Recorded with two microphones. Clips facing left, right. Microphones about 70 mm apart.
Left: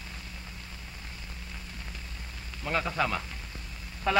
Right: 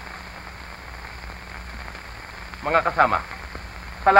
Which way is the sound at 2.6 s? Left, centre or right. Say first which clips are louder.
Right 11 dB; right.